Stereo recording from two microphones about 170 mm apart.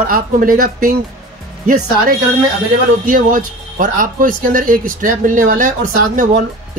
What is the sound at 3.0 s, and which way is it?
Speech, 50° right (ahead or behind).